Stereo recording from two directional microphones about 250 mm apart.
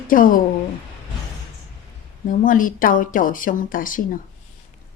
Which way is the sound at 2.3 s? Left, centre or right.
Left.